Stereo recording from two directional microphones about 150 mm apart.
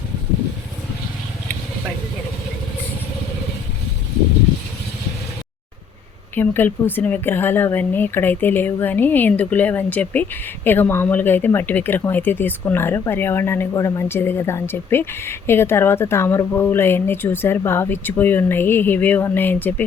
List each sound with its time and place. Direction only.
6.3 s speech: 15° left (ahead or behind)